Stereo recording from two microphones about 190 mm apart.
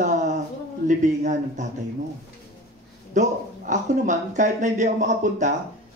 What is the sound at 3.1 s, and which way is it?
Speech, 40° right (ahead or behind).